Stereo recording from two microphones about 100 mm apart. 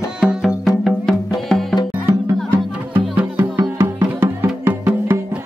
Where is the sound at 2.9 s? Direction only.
20° right (ahead or behind).